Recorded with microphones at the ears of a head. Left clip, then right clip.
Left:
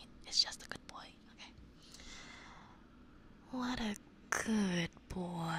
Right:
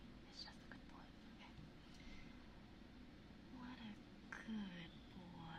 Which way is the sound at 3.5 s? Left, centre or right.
Left.